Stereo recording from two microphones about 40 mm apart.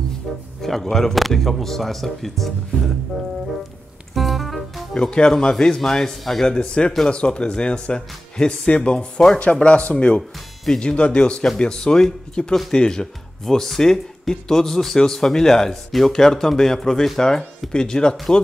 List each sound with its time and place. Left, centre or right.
0.6 s speech: centre
4.1 s music: centre
4.9 s speech: left
17.7 s speech: centre